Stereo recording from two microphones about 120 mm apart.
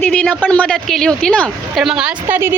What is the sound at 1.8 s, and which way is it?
Speech, 5° right (ahead or behind).